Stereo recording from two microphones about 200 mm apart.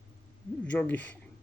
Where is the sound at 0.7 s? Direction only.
10° left (ahead or behind).